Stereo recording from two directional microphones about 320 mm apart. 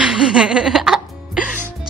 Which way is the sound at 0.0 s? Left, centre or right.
Centre.